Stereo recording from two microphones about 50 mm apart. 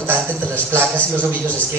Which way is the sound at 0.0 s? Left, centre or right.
Right.